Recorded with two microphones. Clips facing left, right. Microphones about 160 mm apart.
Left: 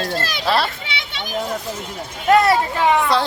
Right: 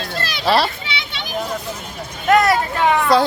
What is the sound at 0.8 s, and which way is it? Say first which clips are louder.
Children playing: right 1 dB; 50° left (ahead or behind).